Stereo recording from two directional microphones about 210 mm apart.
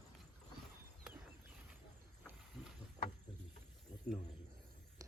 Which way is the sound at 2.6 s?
5° right (ahead or behind).